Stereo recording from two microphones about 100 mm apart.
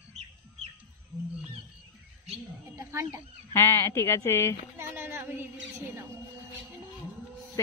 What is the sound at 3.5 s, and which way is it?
Speech, 25° left (ahead or behind).